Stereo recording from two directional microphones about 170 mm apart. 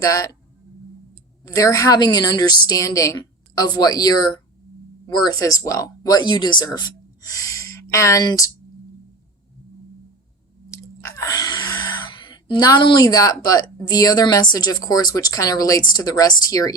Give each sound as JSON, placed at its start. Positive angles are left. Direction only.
{"t": 0.0, "sound": "a woman's voice", "side_deg": 20}
{"t": 1.5, "sound": "a woman's voice", "side_deg": 20}
{"t": 10.7, "sound": "speech", "side_deg": 20}